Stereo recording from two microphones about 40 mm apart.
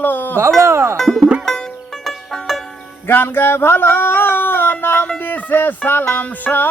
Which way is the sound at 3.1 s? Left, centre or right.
Left.